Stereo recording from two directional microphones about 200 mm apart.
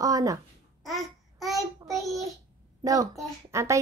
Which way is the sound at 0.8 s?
Centre (ahead or behind).